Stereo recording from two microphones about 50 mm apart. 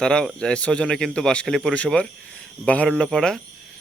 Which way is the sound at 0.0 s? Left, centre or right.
Centre.